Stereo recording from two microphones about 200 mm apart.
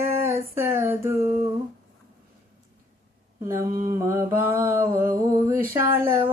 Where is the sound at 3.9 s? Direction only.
15° right (ahead or behind).